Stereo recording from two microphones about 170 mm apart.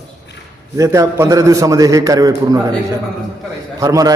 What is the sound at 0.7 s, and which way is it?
A man's voice, 20° right (ahead or behind).